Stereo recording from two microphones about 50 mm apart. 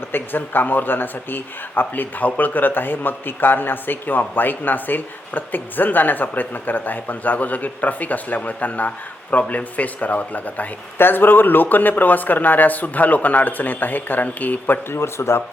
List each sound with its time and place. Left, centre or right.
0.1 s speech: left
10.9 s speech: left
14.8 s speech: left